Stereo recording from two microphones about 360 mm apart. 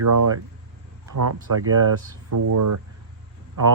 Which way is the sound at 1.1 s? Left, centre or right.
Right.